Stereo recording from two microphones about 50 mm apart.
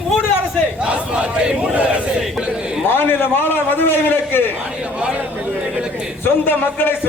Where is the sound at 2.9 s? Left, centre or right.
Left.